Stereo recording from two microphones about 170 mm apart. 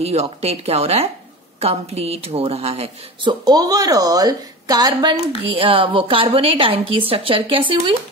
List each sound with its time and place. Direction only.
0.0 s a woman's voice: 35° right (ahead or behind)
3.4 s a woman's voice: 20° right (ahead or behind)
5.4 s a woman's voice: 35° right (ahead or behind)